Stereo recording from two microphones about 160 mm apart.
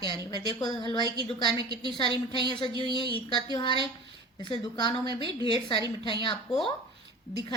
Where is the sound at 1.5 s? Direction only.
25° right (ahead or behind).